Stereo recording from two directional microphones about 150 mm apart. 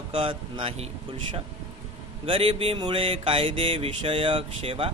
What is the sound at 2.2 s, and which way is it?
Speech, 40° right (ahead or behind).